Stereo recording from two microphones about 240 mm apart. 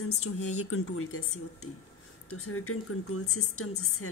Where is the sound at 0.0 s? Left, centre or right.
Left.